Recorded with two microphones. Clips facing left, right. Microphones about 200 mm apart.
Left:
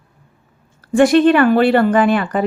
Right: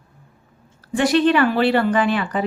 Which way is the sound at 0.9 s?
50° left (ahead or behind).